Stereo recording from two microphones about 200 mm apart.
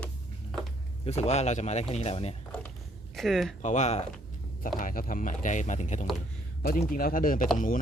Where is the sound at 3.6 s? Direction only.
35° left (ahead or behind).